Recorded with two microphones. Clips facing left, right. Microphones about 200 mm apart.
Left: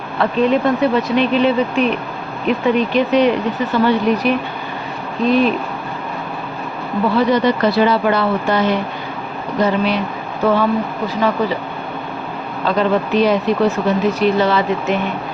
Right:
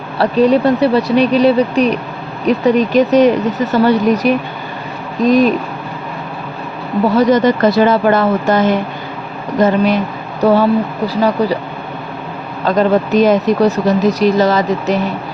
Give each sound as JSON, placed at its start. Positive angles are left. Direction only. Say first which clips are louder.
{"t": 0.2, "sound": "speech", "louder": "right 4 dB", "side_deg": -40}
{"t": 7.2, "sound": "speech", "louder": "right 4 dB", "side_deg": -45}
{"t": 12.6, "sound": "speech", "louder": "right 4 dB", "side_deg": -45}